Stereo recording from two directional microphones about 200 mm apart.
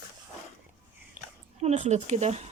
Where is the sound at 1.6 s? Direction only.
35° right (ahead or behind).